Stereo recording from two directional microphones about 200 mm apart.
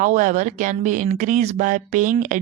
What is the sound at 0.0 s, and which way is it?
Speech, 40° right (ahead or behind).